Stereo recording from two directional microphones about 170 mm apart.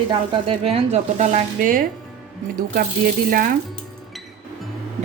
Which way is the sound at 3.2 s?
55° right (ahead or behind).